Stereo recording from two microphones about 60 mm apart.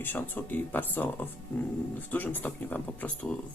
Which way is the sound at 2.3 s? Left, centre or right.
Left.